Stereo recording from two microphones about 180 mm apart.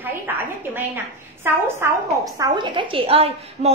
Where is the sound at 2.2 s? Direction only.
25° right (ahead or behind).